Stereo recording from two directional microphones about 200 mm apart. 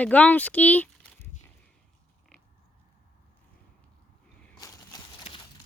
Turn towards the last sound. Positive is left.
turn(degrees=20)  # may be behind; listen again after turning